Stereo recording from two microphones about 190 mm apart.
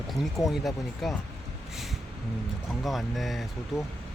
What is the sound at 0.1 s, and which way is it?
Speech, centre (ahead or behind).